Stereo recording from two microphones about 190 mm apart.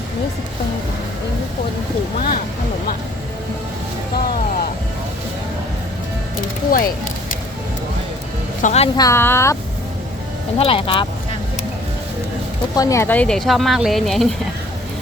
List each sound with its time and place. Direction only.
2.1 s a sound: 45° left (ahead or behind)
6.7 s speech: 50° left (ahead or behind)
8.6 s speech: 35° left (ahead or behind)
9.0 s speech: 15° left (ahead or behind)
10.6 s speech: 30° left (ahead or behind)
12.7 s speech: 15° left (ahead or behind); by 14.3 s centre (ahead or behind)